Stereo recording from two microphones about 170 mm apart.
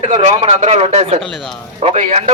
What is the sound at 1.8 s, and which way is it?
Speech, 45° right (ahead or behind).